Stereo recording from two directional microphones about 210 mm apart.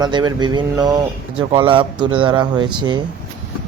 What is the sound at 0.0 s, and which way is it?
Speech, 20° right (ahead or behind).